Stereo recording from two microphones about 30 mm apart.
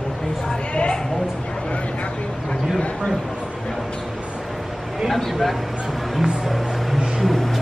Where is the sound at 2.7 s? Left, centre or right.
Left.